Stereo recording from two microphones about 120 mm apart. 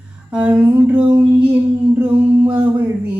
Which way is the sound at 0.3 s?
10° right (ahead or behind).